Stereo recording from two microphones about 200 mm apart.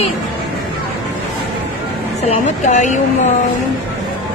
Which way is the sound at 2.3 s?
35° left (ahead or behind).